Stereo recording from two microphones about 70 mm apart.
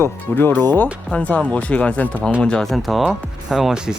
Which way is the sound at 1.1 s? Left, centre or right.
Centre.